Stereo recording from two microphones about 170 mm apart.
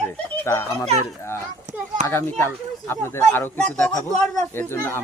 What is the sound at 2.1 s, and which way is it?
Speech, 15° left (ahead or behind).